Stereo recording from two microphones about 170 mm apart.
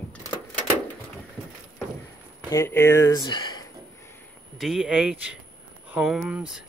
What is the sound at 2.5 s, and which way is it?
Speech, 15° left (ahead or behind).